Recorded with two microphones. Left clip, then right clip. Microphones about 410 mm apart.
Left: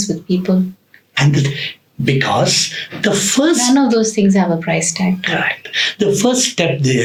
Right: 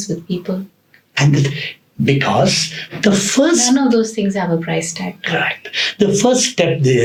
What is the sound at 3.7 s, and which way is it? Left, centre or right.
A woman's voice, left.